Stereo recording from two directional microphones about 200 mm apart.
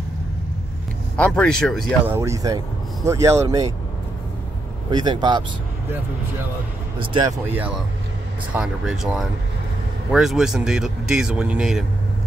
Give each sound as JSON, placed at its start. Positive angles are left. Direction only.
{"t": 1.1, "sound": "speech", "side_deg": 5}
{"t": 2.0, "sound": "speech", "side_deg": -15}
{"t": 4.9, "sound": "speech", "side_deg": -20}
{"t": 7.0, "sound": "speech", "side_deg": -25}
{"t": 7.4, "sound": "speech", "side_deg": -10}